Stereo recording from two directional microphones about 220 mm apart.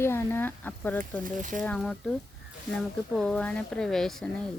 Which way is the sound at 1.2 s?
35° right (ahead or behind).